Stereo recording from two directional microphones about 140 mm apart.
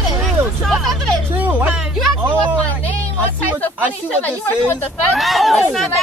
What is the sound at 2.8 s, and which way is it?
Speech, 10° left (ahead or behind).